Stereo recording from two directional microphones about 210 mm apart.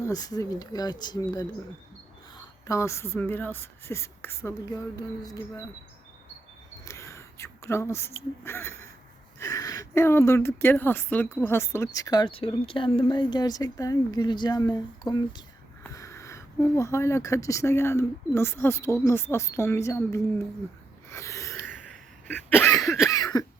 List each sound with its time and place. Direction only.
0.0 s speech: 15° left (ahead or behind)
2.6 s speech: 15° left (ahead or behind)
6.8 s whispering: 15° left (ahead or behind)
9.4 s speech: 15° left (ahead or behind)
21.1 s a sound: 15° left (ahead or behind)
22.8 s cough: centre (ahead or behind)
23.0 s cough: 15° left (ahead or behind)